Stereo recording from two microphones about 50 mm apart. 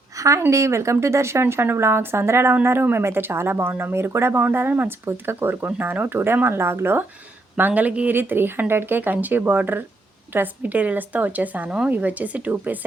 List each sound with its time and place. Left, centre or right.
0.2 s speech: right
0.5 s a woman's voice: right
4.5 s speech: right
5.0 s speech: right
7.5 s a woman's voice: right
8.1 s a woman's voice: right